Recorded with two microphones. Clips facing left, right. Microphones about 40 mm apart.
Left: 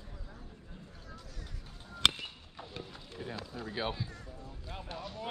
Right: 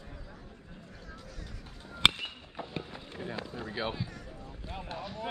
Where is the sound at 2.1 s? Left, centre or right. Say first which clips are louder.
Right 4 dB; right.